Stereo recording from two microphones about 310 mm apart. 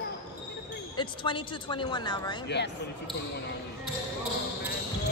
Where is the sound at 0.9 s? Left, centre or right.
Centre.